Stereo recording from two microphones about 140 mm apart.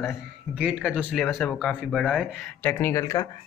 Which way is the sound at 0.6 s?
5° right (ahead or behind).